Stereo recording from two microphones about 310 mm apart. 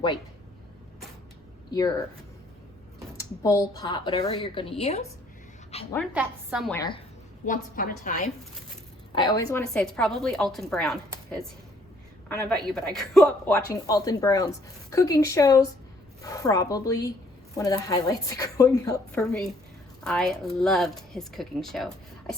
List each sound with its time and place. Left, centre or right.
1.7 s speech: centre
3.2 s a woman's voice: centre
5.9 s a woman's voice: centre
6.7 s speech: centre
7.4 s a woman's voice: left
9.1 s a woman's voice: centre